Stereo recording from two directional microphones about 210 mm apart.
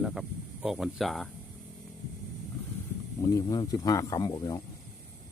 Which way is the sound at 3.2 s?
15° left (ahead or behind).